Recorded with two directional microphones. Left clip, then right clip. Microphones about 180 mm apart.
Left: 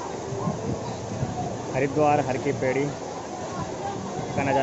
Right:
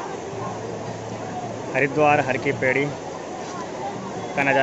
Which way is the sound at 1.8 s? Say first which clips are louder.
Right 4 dB; 10° left (ahead or behind).